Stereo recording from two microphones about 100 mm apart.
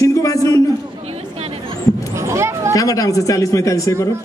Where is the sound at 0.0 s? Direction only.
35° left (ahead or behind).